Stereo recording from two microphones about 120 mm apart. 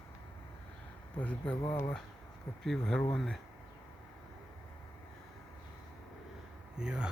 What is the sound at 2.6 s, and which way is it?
Speech, 5° left (ahead or behind).